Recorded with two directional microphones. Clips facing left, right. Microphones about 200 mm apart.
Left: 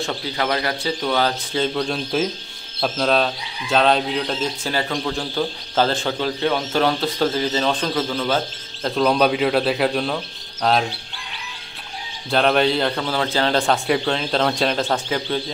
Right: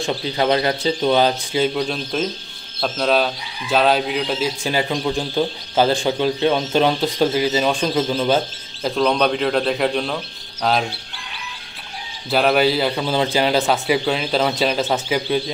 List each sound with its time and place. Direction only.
0.0 s speech: 20° right (ahead or behind); by 4.5 s 5° right (ahead or behind)
4.6 s speech: 15° right (ahead or behind)
8.8 s speech: centre (ahead or behind)
12.3 s speech: 5° right (ahead or behind)
13.0 s speech: 15° right (ahead or behind)